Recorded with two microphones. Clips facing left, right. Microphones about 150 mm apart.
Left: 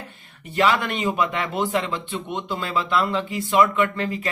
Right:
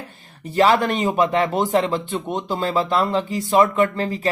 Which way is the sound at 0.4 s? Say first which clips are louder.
Right 4 dB; 40° right (ahead or behind).